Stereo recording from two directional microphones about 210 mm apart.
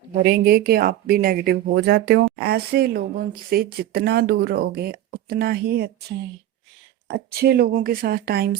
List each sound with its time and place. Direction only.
0.3 s speech: 50° right (ahead or behind)